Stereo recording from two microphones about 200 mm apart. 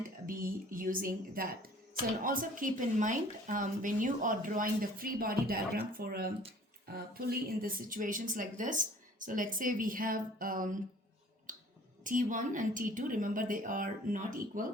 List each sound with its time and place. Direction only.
0.3 s a woman's voice: 45° right (ahead or behind)
11.5 s finger snapping: 40° right (ahead or behind)
12.0 s a woman's voice: 40° right (ahead or behind)